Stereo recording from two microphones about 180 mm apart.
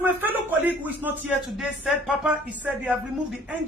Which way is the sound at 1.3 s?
5° right (ahead or behind).